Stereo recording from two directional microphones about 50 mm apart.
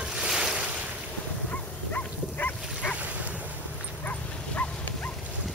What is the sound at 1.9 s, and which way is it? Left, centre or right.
Dog, left.